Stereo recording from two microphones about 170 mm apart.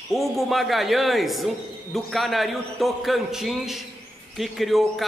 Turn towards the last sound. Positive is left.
turn(degrees=0)  # may be behind; listen again after turning